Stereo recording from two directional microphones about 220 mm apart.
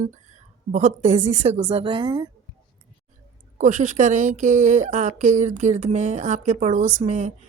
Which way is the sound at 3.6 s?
35° right (ahead or behind).